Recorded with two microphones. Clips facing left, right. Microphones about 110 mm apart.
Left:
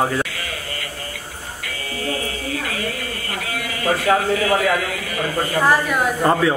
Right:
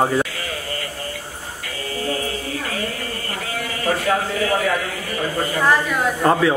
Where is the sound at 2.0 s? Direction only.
30° right (ahead or behind).